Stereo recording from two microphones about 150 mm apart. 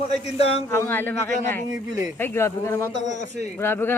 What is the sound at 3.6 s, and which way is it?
Speech, 15° left (ahead or behind).